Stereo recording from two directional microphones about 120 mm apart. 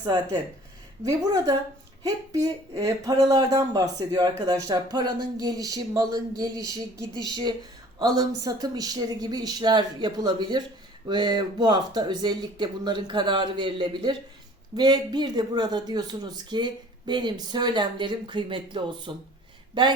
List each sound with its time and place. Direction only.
1.0 s speech: 30° right (ahead or behind)
7.1 s speech: 35° left (ahead or behind)
7.9 s speech: 30° right (ahead or behind)